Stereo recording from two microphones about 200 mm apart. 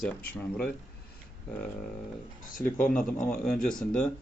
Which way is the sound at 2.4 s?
40° left (ahead or behind).